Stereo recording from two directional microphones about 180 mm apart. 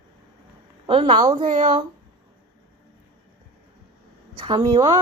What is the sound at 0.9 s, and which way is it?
Speech, 30° right (ahead or behind).